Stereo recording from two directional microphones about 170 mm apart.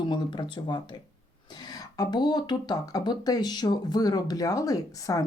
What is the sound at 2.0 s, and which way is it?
Speech, 25° left (ahead or behind).